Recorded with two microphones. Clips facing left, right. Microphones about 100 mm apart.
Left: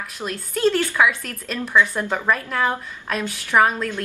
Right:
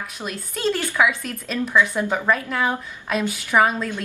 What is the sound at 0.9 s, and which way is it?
A woman's voice, 5° right (ahead or behind).